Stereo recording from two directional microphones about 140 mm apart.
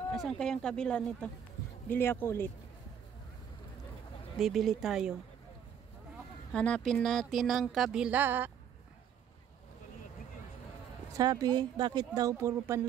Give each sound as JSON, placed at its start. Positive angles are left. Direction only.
{"t": 0.1, "sound": "speech", "side_deg": 0}
{"t": 4.4, "sound": "speech", "side_deg": 0}
{"t": 6.5, "sound": "speech", "side_deg": 5}
{"t": 11.1, "sound": "speech", "side_deg": -25}